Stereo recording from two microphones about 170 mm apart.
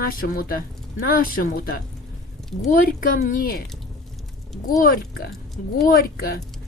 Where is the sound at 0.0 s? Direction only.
60° left (ahead or behind).